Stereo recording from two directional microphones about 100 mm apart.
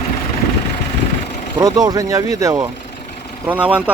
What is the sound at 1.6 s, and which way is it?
Speech, 40° right (ahead or behind).